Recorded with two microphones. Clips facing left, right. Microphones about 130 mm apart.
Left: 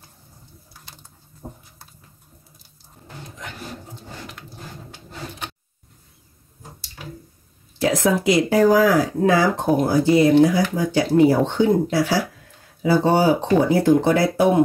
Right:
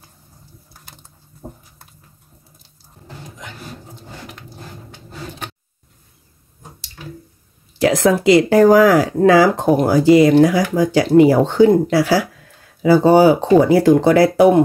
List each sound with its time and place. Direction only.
7.8 s speech: 85° right